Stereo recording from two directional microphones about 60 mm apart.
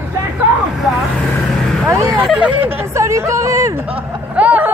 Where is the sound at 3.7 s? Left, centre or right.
Right.